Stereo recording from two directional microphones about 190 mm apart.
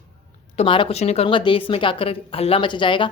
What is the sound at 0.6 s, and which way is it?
A woman's voice, 30° left (ahead or behind).